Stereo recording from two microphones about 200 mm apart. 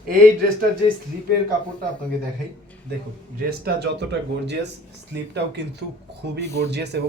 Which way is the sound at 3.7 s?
55° right (ahead or behind).